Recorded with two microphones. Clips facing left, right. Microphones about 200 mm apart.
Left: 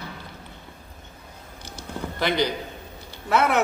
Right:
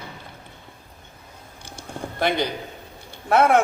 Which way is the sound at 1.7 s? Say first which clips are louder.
Right 1 dB; 55° right (ahead or behind).